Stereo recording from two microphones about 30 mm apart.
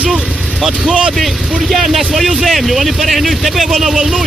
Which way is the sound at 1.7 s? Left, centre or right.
Centre.